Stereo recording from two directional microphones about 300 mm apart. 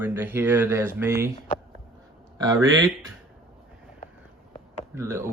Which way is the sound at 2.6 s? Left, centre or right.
Right.